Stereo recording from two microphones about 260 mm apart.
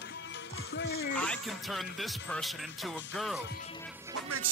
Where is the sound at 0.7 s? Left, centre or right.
Left.